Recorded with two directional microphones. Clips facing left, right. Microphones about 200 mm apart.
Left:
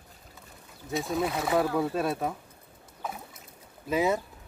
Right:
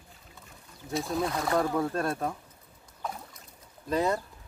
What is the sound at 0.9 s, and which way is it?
Speech, centre (ahead or behind).